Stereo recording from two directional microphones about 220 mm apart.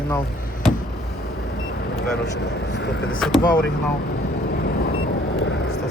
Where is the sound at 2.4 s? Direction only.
50° left (ahead or behind).